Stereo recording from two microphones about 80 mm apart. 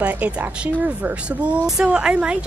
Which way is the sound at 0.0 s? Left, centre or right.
Centre.